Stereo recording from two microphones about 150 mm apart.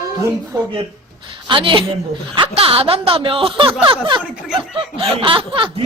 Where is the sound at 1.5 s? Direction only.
35° right (ahead or behind).